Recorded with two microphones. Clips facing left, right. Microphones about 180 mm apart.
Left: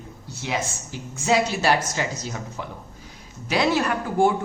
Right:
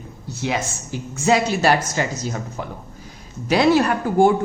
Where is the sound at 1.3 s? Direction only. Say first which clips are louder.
Right 3 dB; 50° right (ahead or behind).